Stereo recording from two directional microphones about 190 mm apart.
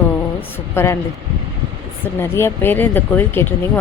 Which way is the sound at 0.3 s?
10° left (ahead or behind).